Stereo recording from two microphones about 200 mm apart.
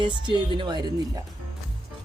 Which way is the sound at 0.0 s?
25° right (ahead or behind).